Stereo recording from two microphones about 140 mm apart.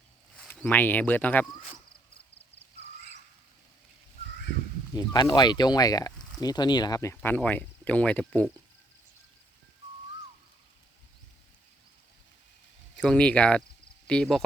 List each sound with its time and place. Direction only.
0.3 s speech: 5° left (ahead or behind)
1.5 s speech: 5° right (ahead or behind)
4.9 s speech: 30° left (ahead or behind)
7.2 s speech: 10° left (ahead or behind)
13.0 s speech: 5° left (ahead or behind)